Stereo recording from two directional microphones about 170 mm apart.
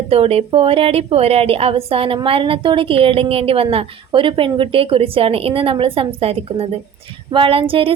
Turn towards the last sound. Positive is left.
turn(degrees=-35)  # may be behind; listen again after turning